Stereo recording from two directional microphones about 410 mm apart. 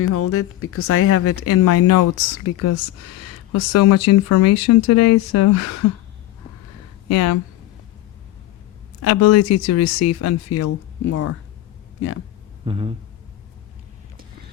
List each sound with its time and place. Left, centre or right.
0.0 s speech: left
7.1 s speech: left
9.0 s speech: left
12.6 s a sound: centre